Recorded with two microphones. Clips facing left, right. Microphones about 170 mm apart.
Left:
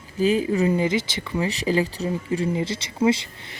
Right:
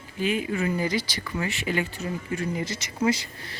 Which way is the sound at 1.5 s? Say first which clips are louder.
Left 7 dB; 35° left (ahead or behind).